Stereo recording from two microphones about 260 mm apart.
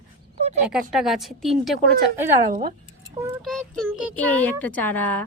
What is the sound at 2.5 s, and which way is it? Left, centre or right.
Speech, right.